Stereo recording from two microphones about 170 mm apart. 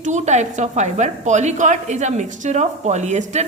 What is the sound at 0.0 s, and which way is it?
A woman's voice, 45° right (ahead or behind).